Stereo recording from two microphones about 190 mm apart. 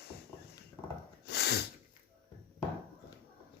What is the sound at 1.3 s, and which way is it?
Sneeze, 60° left (ahead or behind).